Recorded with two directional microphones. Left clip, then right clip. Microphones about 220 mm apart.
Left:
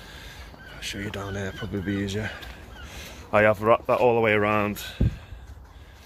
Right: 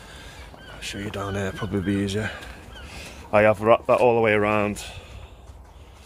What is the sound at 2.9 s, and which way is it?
Speech, 10° right (ahead or behind).